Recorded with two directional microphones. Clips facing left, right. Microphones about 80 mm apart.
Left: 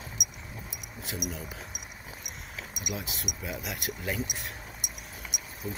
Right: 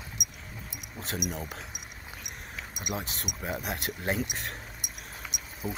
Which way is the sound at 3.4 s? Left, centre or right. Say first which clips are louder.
Right 4 dB; right.